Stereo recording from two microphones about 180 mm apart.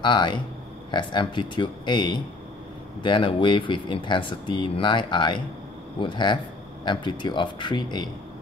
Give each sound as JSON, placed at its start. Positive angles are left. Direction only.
{"t": 0.0, "sound": "speech", "side_deg": 25}